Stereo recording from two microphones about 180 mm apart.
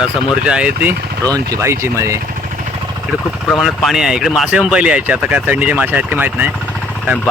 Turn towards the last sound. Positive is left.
turn(degrees=-10)  # may be behind; listen again after turning